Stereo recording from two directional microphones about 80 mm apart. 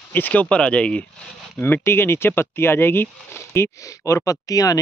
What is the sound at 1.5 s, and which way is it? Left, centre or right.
Speech, left.